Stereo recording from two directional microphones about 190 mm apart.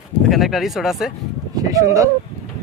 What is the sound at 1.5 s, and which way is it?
Speech, 20° right (ahead or behind).